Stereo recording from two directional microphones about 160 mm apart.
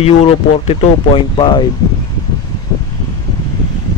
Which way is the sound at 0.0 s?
40° left (ahead or behind).